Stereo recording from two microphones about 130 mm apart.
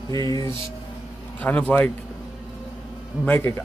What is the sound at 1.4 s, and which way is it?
Speech, 10° left (ahead or behind).